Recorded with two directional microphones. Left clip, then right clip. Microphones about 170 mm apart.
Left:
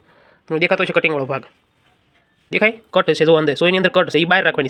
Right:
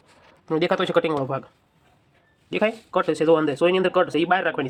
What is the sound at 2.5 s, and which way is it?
Speech, 15° left (ahead or behind).